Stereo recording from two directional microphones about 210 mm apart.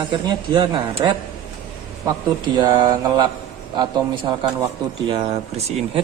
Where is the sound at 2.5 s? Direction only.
20° right (ahead or behind).